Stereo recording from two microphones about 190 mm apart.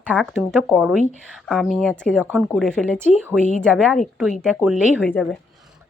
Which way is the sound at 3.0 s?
10° right (ahead or behind).